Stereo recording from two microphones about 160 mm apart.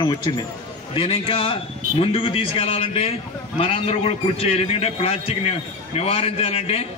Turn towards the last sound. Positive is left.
turn(degrees=40)  # may be behind; listen again after turning